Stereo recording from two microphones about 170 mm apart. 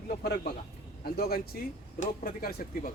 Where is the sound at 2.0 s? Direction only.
55° left (ahead or behind).